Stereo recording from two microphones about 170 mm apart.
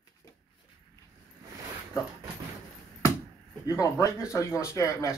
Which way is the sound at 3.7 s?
20° left (ahead or behind).